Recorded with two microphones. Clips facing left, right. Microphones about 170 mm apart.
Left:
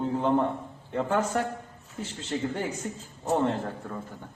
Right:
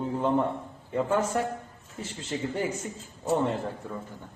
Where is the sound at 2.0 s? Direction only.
Centre (ahead or behind).